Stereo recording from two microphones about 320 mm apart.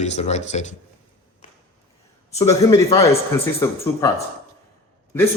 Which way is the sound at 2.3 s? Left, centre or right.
Centre.